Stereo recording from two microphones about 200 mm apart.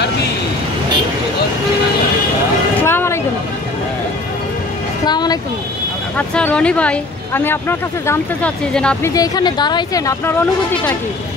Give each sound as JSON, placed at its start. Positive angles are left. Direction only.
{"t": 2.8, "sound": "vehicle", "side_deg": 10}
{"t": 5.0, "sound": "speech", "side_deg": 20}
{"t": 6.1, "sound": "speech", "side_deg": 5}
{"t": 9.1, "sound": "speech", "side_deg": 20}